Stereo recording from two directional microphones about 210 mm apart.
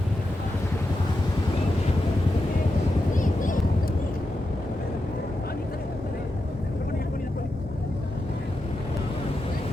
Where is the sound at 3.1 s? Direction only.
40° left (ahead or behind).